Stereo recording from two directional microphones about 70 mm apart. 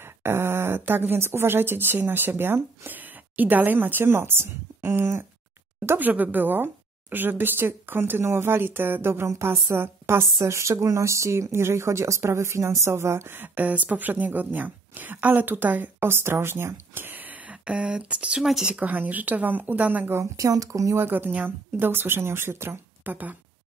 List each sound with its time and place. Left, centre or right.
0.2 s speech: right
5.9 s a woman's voice: right
20.3 s speech: right
20.9 s speech: right